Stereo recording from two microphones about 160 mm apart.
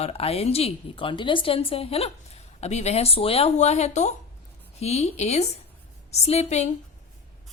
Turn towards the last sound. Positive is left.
turn(degrees=40)  # may be behind; listen again after turning